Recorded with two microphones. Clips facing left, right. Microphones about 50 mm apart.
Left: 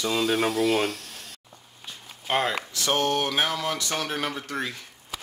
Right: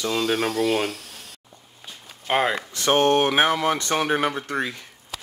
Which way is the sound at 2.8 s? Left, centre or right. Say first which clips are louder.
Right 6 dB; right.